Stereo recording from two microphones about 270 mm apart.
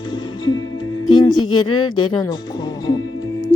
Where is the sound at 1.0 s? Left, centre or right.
Centre.